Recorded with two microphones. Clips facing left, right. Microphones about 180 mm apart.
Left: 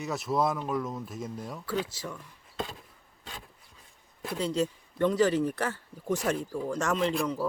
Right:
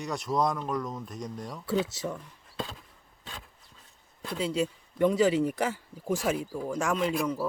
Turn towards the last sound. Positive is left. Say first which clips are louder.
# even
turn(degrees=-10)  # may be behind; listen again after turning